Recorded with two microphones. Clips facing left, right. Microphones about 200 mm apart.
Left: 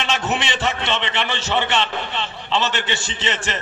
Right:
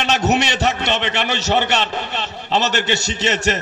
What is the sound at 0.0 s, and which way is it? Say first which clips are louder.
A man's voice: right 5 dB; 40° right (ahead or behind).